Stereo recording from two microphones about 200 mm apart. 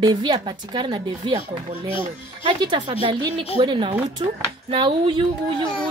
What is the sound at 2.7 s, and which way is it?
A woman's voice, 25° right (ahead or behind).